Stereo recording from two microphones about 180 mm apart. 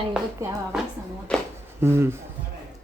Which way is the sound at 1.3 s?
5° left (ahead or behind).